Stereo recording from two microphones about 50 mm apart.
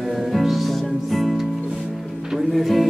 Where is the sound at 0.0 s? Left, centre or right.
Centre.